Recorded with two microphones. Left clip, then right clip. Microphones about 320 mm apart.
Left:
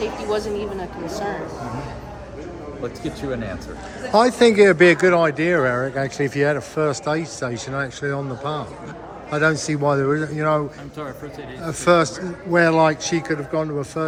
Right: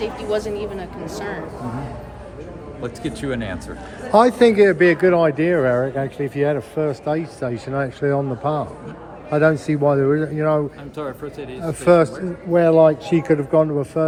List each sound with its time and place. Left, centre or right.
0.0 s speech: centre
3.0 s speech: right
4.1 s a man's voice: centre